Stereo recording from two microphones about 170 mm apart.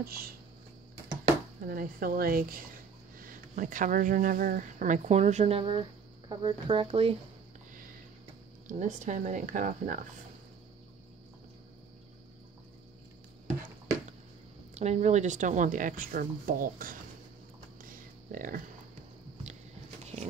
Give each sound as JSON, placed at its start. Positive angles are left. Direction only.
{"t": 0.0, "sound": "speech", "side_deg": -60}
{"t": 1.7, "sound": "speech", "side_deg": -55}
{"t": 8.6, "sound": "speech", "side_deg": -45}
{"t": 14.7, "sound": "speech", "side_deg": -40}
{"t": 17.8, "sound": "a sound", "side_deg": -55}
{"t": 20.0, "sound": "a sound", "side_deg": -40}